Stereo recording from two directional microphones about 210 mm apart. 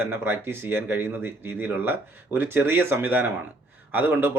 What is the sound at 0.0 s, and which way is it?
Speech, 10° right (ahead or behind).